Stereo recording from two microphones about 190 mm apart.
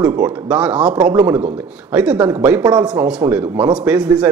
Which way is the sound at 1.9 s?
5° right (ahead or behind).